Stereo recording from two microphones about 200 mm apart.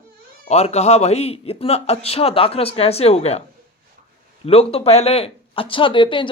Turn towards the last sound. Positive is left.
turn(degrees=25)  # may be behind; listen again after turning